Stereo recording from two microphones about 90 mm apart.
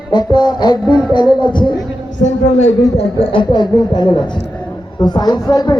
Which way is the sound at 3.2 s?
90° left.